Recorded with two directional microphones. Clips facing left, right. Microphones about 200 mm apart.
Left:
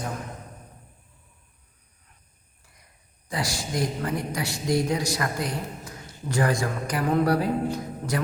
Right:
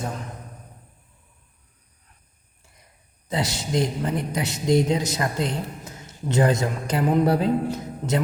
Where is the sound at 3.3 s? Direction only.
25° right (ahead or behind).